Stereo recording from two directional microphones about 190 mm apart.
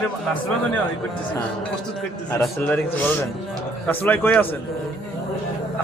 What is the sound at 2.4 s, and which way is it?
A man's voice, 10° left (ahead or behind).